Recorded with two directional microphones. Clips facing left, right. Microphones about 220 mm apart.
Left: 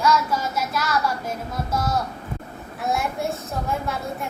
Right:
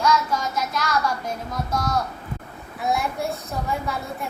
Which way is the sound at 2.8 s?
Centre (ahead or behind).